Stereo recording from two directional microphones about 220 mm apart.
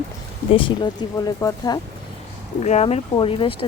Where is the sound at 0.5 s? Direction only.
20° left (ahead or behind).